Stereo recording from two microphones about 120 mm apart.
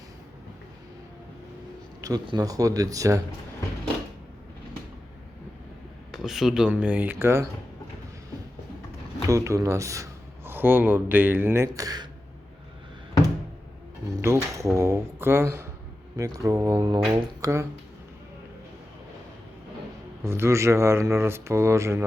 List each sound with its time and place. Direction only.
2.0 s a sound: 30° right (ahead or behind)
2.2 s speech: 35° right (ahead or behind)
6.1 s speech: centre (ahead or behind); by 7.4 s 20° right (ahead or behind)
9.2 s a man's voice: 25° right (ahead or behind)
14.2 s speech: 25° right (ahead or behind)
20.2 s speech: 20° right (ahead or behind)